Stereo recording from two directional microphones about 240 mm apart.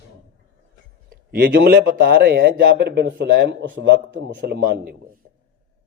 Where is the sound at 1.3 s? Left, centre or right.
Right.